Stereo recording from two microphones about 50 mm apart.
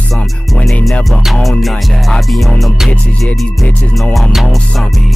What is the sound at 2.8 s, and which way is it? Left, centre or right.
Music, centre.